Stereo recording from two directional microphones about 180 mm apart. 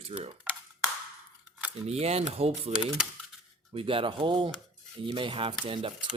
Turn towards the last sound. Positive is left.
turn(degrees=-30)  # may be behind; listen again after turning